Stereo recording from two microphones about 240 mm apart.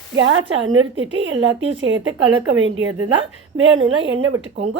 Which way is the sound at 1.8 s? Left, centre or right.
Right.